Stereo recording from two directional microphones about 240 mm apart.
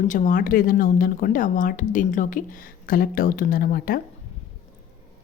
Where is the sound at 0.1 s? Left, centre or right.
Left.